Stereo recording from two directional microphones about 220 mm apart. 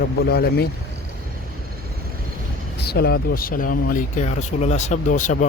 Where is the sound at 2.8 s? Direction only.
45° left (ahead or behind).